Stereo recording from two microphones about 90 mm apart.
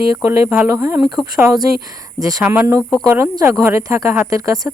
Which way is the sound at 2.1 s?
45° right (ahead or behind).